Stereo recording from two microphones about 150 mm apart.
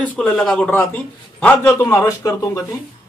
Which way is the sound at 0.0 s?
10° left (ahead or behind).